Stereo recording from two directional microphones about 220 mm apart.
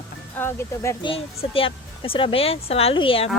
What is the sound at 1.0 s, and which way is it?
Speech, 25° left (ahead or behind).